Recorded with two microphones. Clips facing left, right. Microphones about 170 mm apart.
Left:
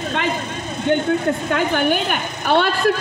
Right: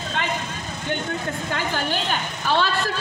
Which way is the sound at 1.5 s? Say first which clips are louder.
Left 6 dB; 60° left (ahead or behind).